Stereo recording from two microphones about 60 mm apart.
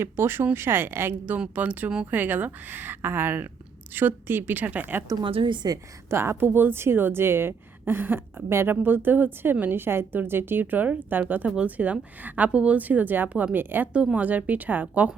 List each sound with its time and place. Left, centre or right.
0.0 s speech: right
1.2 s a woman's voice: right
5.6 s a woman's voice: right
6.1 s a woman's voice: right
13.9 s a woman's voice: centre